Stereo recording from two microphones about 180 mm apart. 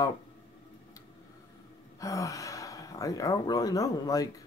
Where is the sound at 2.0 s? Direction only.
20° left (ahead or behind).